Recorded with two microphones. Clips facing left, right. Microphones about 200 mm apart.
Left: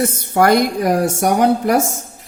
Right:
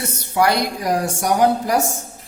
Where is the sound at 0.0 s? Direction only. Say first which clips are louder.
Left 4 dB; 50° left (ahead or behind).